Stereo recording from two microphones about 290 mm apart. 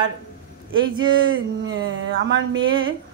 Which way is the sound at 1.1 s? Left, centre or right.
Right.